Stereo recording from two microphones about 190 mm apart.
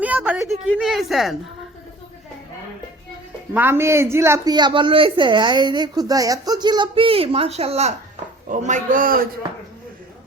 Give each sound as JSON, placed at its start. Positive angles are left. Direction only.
{"t": 0.0, "sound": "a woman's voice", "side_deg": -10}
{"t": 3.5, "sound": "a woman's voice", "side_deg": -10}